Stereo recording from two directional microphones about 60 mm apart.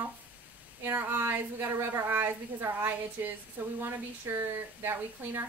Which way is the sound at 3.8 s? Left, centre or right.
Right.